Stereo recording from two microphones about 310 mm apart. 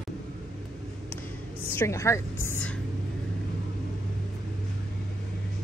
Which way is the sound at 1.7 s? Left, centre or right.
Centre.